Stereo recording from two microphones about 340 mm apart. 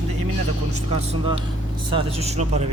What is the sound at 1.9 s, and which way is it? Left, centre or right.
Speech, centre.